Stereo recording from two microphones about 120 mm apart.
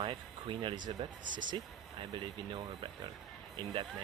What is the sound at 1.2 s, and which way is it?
Speech, 90° right.